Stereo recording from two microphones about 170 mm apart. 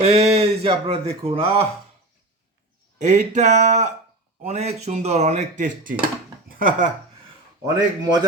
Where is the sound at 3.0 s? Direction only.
45° right (ahead or behind).